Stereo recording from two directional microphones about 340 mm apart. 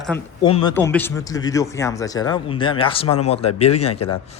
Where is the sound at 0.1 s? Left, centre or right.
Centre.